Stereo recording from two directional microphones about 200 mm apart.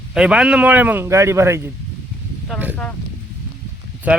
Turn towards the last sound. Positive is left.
turn(degrees=-10)  # may be behind; listen again after turning